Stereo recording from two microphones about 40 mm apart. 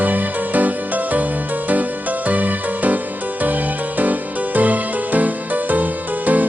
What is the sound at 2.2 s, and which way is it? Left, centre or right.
Music, right.